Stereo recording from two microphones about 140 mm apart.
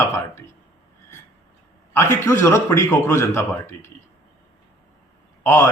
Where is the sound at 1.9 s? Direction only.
20° left (ahead or behind).